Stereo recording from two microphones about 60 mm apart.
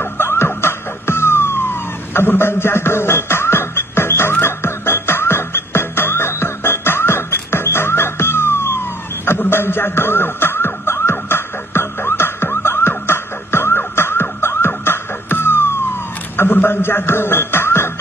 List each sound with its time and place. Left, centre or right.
0.2 s music: left
0.6 s emergency vehicle: left
14.4 s music: left
16.3 s a sound: left